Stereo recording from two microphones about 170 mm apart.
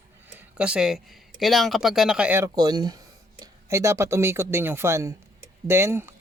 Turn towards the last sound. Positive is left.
turn(degrees=-15)  # may be behind; listen again after turning